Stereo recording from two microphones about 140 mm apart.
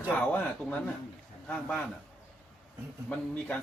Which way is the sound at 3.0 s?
10° left (ahead or behind).